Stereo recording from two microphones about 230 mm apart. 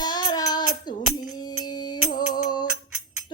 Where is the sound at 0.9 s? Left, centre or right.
Centre.